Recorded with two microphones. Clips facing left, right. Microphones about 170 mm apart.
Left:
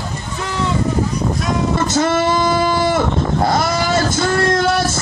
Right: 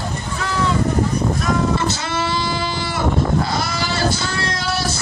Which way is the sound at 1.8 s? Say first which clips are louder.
Left 7 dB; 45° left (ahead or behind).